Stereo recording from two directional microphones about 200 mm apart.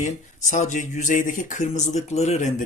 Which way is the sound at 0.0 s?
35° left (ahead or behind).